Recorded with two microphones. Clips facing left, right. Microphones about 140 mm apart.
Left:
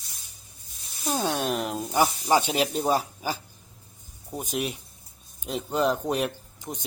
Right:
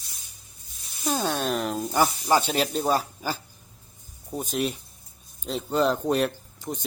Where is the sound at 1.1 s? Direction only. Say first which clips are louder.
Even; 15° left (ahead or behind).